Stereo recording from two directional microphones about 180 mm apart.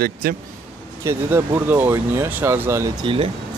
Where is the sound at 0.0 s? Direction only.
55° right (ahead or behind).